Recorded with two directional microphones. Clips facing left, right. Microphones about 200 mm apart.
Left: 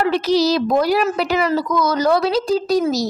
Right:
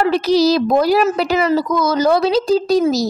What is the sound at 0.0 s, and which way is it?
A woman's voice, 35° right (ahead or behind).